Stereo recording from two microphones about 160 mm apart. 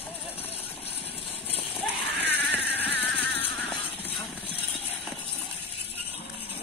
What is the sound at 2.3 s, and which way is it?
Vehicle, 10° left (ahead or behind).